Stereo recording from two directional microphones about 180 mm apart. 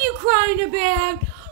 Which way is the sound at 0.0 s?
25° right (ahead or behind).